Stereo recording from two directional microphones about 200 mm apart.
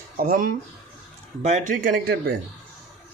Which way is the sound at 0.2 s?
45° right (ahead or behind).